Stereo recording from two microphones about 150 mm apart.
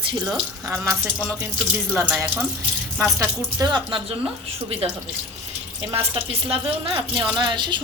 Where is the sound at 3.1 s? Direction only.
20° right (ahead or behind).